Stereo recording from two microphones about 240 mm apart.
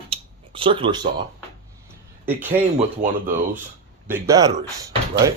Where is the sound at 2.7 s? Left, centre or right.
Right.